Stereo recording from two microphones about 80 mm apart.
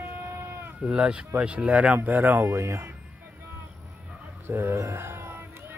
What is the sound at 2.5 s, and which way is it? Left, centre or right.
Speech, right.